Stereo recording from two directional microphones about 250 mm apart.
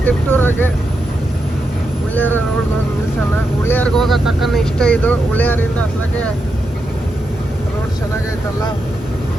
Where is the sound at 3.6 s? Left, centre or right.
Centre.